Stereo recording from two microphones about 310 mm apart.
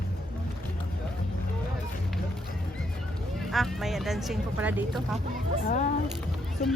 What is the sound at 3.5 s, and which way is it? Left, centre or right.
Speech, centre.